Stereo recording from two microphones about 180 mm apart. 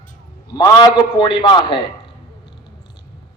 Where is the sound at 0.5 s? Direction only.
25° left (ahead or behind).